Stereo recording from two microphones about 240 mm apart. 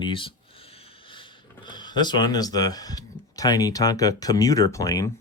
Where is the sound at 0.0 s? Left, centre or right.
Left.